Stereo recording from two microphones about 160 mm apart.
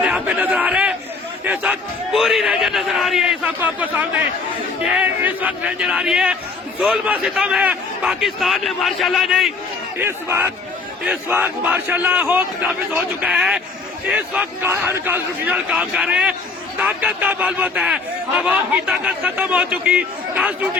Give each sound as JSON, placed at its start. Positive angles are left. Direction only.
{"t": 0.0, "sound": "a sound", "side_deg": -10}
{"t": 2.1, "sound": "a man's voice", "side_deg": 0}
{"t": 10.0, "sound": "a man's voice", "side_deg": -15}